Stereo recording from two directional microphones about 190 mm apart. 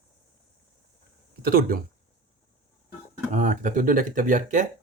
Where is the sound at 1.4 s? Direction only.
50° right (ahead or behind).